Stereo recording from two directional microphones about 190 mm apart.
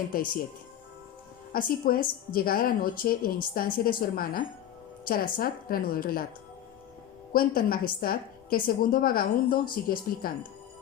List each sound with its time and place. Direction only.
0.1 s a woman's voice: 50° left (ahead or behind)
1.5 s a woman's voice: 45° left (ahead or behind)
7.3 s a woman's voice: 50° left (ahead or behind)